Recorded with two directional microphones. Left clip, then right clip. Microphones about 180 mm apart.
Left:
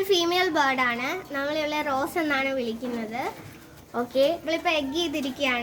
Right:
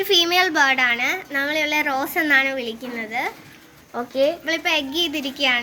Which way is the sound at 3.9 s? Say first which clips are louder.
Right 2 dB; 15° right (ahead or behind).